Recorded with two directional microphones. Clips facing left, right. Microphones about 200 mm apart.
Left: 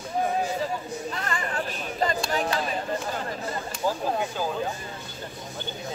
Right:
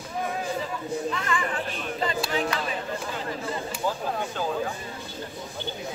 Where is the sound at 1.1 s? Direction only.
40° left (ahead or behind).